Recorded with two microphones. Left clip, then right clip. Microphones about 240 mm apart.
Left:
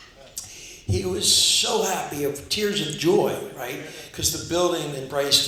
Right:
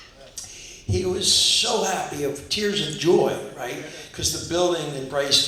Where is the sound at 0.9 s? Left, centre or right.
Left.